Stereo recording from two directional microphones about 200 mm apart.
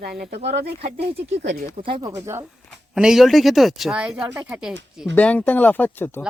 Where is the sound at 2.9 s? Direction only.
5° right (ahead or behind).